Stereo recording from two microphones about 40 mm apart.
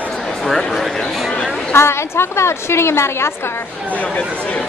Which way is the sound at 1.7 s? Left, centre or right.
Left.